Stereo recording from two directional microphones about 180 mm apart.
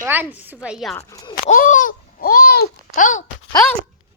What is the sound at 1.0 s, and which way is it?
Speech, 20° left (ahead or behind).